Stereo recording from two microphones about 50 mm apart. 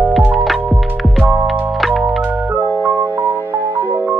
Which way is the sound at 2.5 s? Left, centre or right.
Right.